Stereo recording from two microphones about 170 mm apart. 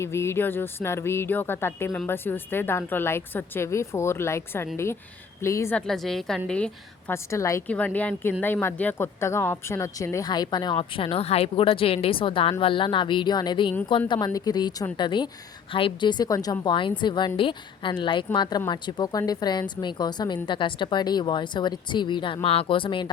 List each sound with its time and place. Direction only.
0.0 s speech: 15° left (ahead or behind)
5.7 s a woman's voice: 5° left (ahead or behind)
7.1 s speech: 15° left (ahead or behind)